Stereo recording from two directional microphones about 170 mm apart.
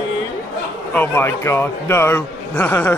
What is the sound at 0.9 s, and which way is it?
A man's voice, 15° left (ahead or behind).